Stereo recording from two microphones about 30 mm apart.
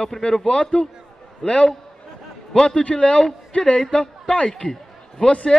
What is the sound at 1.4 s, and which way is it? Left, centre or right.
A man's voice, centre.